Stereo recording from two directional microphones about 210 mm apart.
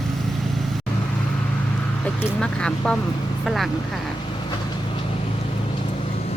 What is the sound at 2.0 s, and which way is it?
Vehicle, 5° left (ahead or behind).